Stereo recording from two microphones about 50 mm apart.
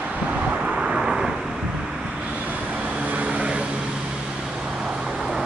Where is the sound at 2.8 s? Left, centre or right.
Right.